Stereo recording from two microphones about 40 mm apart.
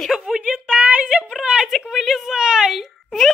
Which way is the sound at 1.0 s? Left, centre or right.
Right.